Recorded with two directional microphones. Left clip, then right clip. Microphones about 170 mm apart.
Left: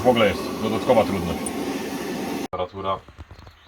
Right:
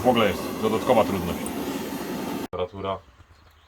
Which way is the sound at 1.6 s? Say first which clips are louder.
Left 3 dB; 25° right (ahead or behind).